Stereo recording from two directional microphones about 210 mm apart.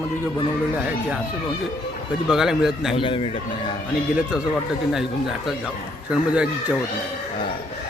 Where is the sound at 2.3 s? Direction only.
Centre (ahead or behind).